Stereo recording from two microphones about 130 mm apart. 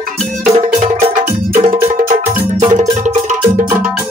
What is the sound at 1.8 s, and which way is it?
Music, 80° right.